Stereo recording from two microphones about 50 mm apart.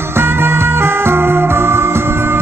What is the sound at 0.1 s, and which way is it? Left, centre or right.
Music, right.